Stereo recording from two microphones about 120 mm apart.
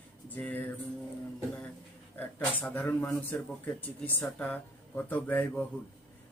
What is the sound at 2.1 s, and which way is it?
Speech, 15° left (ahead or behind).